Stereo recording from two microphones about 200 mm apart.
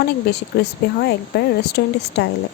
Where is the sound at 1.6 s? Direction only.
55° left (ahead or behind).